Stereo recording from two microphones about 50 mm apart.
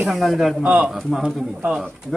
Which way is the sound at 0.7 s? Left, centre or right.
Right.